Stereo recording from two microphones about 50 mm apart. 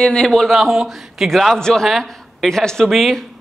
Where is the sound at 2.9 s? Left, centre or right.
Centre.